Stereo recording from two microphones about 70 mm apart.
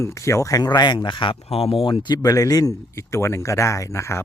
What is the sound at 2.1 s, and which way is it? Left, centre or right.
Speech, left.